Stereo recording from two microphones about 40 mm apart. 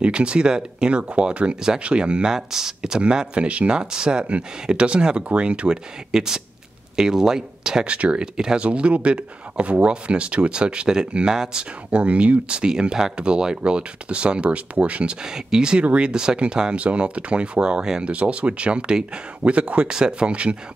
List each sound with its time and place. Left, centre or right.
0.0 s speech: right
2.3 s speech: centre
3.0 s speech: right
3.7 s speech: centre
6.1 s speech: centre
7.8 s speech: right
8.4 s speech: centre
8.6 s speech: right
15.2 s speech: centre